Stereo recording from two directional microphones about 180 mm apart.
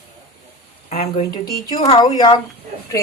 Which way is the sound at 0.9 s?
35° left (ahead or behind).